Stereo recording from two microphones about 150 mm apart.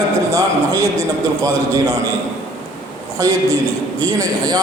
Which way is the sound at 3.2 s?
25° right (ahead or behind).